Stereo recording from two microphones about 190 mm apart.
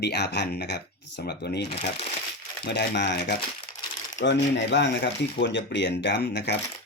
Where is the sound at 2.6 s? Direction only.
65° left (ahead or behind).